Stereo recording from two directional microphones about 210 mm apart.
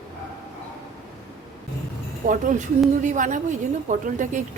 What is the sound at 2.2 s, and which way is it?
Speech, 40° right (ahead or behind).